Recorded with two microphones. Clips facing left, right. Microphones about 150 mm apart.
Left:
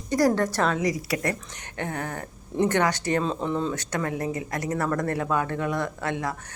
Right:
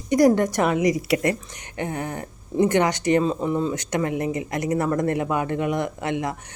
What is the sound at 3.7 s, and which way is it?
Speech, 20° right (ahead or behind).